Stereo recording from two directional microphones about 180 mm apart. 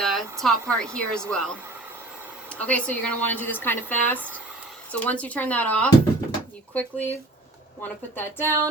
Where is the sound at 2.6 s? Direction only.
5° left (ahead or behind).